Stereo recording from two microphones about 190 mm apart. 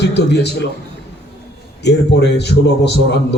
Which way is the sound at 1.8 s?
65° left (ahead or behind).